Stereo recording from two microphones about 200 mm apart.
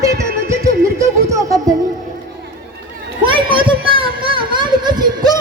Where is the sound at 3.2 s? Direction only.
25° right (ahead or behind).